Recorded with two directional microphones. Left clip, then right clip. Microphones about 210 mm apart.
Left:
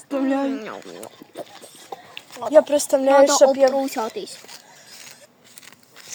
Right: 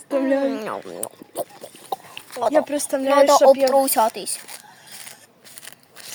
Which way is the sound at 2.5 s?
20° left (ahead or behind).